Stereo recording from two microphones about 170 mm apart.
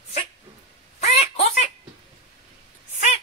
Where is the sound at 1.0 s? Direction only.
40° left (ahead or behind).